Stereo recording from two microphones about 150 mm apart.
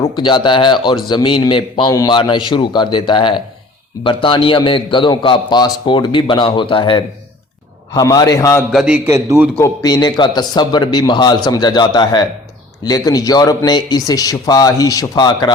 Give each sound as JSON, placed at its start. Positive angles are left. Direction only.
{"t": 0.2, "sound": "a man's voice", "side_deg": 30}
{"t": 7.9, "sound": "speech", "side_deg": 25}
{"t": 8.7, "sound": "a man's voice", "side_deg": -5}
{"t": 9.0, "sound": "a man's voice", "side_deg": -20}
{"t": 9.6, "sound": "speech", "side_deg": 25}